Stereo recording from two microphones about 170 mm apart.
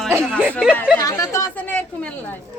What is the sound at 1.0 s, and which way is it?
A woman's voice, 20° left (ahead or behind).